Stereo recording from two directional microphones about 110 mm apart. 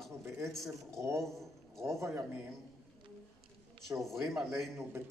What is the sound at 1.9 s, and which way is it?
Speech, 25° right (ahead or behind).